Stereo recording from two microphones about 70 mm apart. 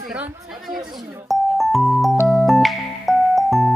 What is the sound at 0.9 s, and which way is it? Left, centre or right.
Speech, centre.